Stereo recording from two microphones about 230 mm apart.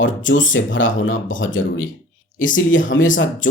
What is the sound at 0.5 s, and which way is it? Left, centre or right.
Speech, left.